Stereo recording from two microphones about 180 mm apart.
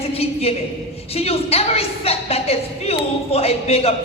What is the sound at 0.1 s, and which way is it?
A woman's voice, 35° left (ahead or behind).